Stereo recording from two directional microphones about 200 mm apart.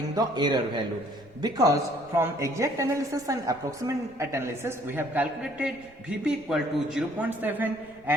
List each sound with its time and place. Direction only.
0.2 s a man's voice: 20° right (ahead or behind)